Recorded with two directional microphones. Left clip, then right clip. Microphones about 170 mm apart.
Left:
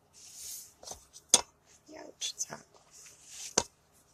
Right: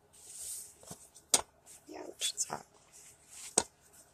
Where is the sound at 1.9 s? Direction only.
35° right (ahead or behind).